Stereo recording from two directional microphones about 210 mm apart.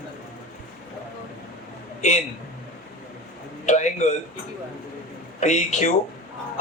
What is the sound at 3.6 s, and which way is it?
Speech, 35° left (ahead or behind).